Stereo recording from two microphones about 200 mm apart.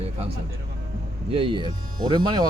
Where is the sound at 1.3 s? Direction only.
25° right (ahead or behind).